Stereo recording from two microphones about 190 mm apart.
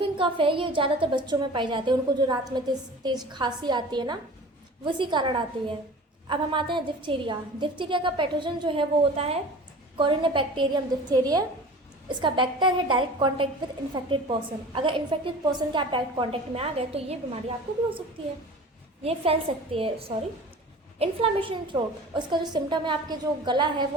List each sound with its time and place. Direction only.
0.0 s a woman's voice: 25° right (ahead or behind)
19.0 s a woman's voice: 30° right (ahead or behind)